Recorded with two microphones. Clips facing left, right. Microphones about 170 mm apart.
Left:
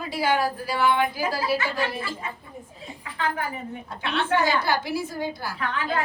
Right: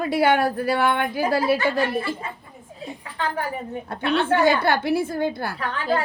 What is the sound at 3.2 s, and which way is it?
A woman's voice, 35° right (ahead or behind).